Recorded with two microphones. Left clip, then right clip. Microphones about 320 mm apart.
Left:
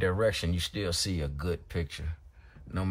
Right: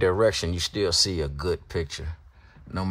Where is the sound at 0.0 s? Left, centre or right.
Centre.